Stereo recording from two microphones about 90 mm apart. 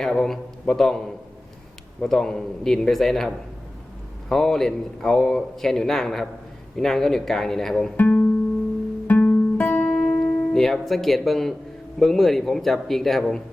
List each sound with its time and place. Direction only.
0.0 s a man's voice: 5° left (ahead or behind)
7.9 s music: 15° left (ahead or behind)
9.0 s guitar: 15° left (ahead or behind)
11.9 s speech: centre (ahead or behind)